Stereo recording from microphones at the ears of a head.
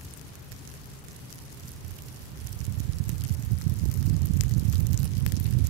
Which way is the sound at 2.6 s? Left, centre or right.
Right.